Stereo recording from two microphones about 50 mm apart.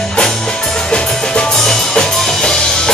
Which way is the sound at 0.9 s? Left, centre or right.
Centre.